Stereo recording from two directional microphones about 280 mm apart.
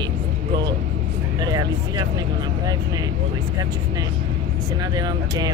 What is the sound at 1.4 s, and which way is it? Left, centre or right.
Speech, centre.